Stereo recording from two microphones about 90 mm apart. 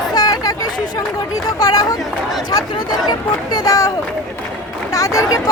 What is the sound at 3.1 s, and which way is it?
Speech, 50° left (ahead or behind).